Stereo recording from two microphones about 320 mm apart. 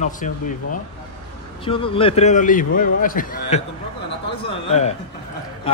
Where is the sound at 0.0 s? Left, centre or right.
Left.